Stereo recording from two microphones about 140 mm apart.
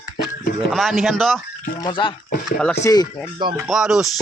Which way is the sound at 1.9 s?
35° left (ahead or behind).